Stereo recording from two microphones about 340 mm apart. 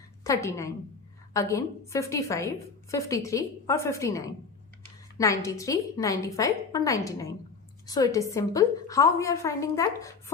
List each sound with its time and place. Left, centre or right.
0.3 s a woman's voice: centre